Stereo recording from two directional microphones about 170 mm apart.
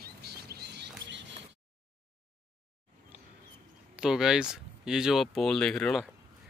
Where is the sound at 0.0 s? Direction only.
70° right (ahead or behind).